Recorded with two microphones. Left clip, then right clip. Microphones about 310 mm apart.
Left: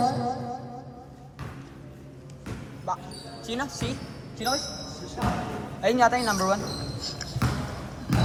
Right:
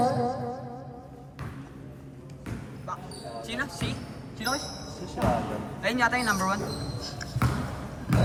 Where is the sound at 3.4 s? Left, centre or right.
Centre.